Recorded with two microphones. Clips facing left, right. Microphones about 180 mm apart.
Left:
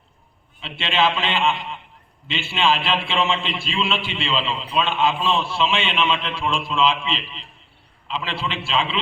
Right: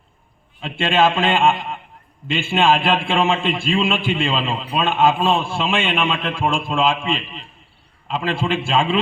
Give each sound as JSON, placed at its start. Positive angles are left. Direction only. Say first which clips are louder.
{"t": 0.6, "sound": "a man's voice", "louder": "right 4 dB", "side_deg": -50}